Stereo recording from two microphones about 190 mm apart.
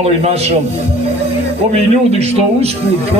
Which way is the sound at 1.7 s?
35° right (ahead or behind).